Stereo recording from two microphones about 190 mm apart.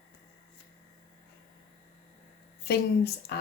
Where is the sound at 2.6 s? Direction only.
60° left (ahead or behind).